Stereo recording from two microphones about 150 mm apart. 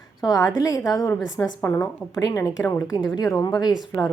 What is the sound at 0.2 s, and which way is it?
A woman's voice, 25° left (ahead or behind).